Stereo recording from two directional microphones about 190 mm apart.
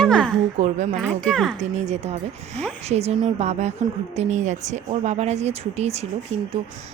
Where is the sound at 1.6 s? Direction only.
35° right (ahead or behind).